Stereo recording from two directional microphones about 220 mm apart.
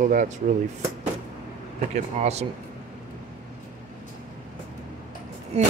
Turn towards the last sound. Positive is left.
turn(degrees=-30)  # may be behind; listen again after turning